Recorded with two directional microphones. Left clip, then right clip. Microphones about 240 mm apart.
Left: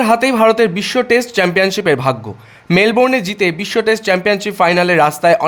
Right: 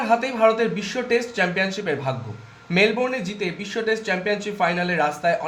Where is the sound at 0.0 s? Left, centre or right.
Left.